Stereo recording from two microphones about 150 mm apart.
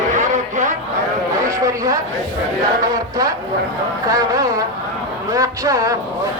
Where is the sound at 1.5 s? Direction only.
20° right (ahead or behind).